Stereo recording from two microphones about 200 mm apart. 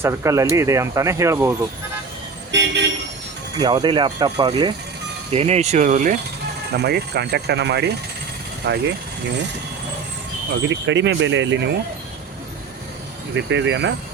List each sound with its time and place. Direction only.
0.0 s speech: 15° right (ahead or behind)
2.5 s speech: 60° right (ahead or behind)
3.6 s speech: 20° right (ahead or behind); by 6.1 s 40° right (ahead or behind)
6.7 s speech: 55° right (ahead or behind)
10.7 s speech: 65° right (ahead or behind)
13.3 s speech: 65° right (ahead or behind)